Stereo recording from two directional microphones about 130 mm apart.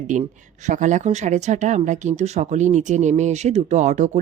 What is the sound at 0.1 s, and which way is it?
Speech, 70° right (ahead or behind).